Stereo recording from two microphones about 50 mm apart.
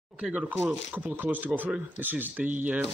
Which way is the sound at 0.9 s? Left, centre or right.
Right.